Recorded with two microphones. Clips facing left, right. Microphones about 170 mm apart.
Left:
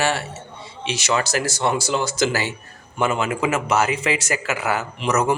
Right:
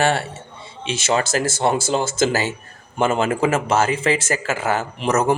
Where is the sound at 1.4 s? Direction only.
45° right (ahead or behind).